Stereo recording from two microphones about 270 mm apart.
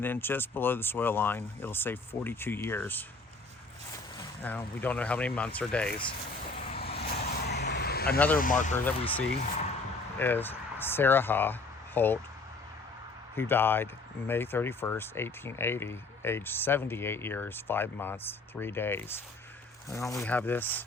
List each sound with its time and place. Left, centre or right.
0.0 s speech: centre
4.2 s speech: centre
6.7 s vehicle: left
7.4 s vehicle: left
8.4 s speech: left
8.7 s speech: centre
13.3 s speech: centre